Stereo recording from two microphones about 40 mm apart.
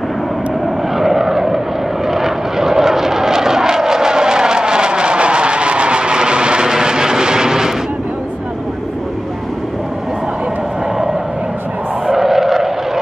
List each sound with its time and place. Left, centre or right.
0.9 s vehicle: centre
12.1 s vehicle: centre